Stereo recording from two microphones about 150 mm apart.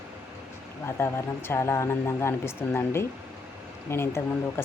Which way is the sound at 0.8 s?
15° left (ahead or behind).